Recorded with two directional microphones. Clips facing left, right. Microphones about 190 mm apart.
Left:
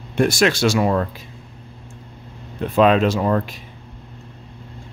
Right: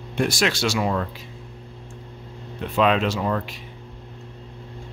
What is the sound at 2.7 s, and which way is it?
Speech, 45° left (ahead or behind).